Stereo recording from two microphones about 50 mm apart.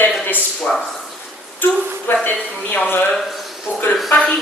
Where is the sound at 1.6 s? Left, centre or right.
Left.